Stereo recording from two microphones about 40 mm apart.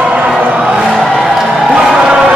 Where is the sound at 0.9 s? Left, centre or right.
Centre.